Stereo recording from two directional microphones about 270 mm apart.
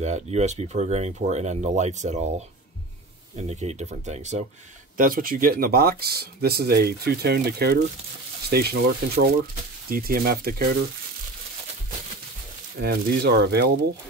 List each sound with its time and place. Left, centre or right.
0.0 s speech: right
3.3 s speech: right
12.8 s speech: right